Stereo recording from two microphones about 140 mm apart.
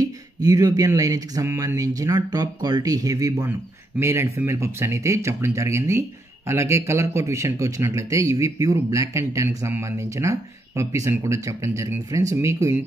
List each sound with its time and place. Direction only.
0.0 s speech: 25° right (ahead or behind)